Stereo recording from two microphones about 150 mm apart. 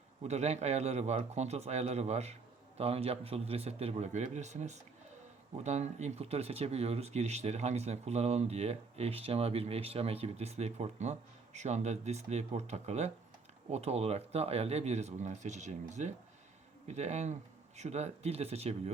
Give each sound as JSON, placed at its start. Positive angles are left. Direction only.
{"t": 0.2, "sound": "speech", "side_deg": -50}